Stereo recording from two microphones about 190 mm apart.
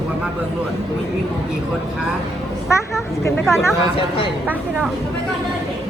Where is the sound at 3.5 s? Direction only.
15° left (ahead or behind).